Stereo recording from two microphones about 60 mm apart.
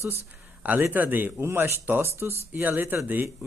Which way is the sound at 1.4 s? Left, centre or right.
Right.